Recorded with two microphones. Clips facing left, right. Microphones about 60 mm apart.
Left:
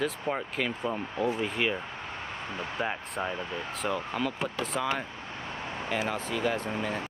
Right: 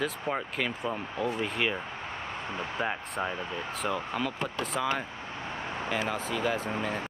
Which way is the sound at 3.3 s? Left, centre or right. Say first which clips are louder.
Even; right.